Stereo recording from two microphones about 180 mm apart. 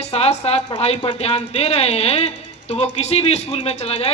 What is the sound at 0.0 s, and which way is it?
Speech, 35° left (ahead or behind).